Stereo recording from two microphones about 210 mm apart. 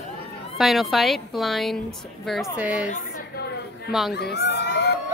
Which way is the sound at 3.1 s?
45° left (ahead or behind).